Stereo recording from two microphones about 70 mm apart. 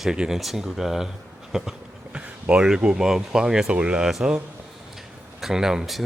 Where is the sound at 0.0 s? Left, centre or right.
Centre.